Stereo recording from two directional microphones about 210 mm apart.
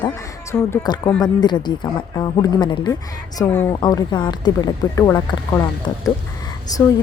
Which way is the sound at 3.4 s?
10° left (ahead or behind).